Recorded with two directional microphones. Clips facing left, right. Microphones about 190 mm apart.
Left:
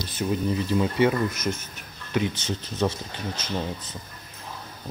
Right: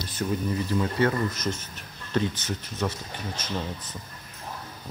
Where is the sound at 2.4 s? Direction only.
30° left (ahead or behind).